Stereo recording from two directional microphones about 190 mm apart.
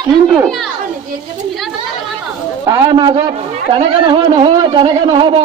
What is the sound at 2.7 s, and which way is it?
Speech, 20° right (ahead or behind).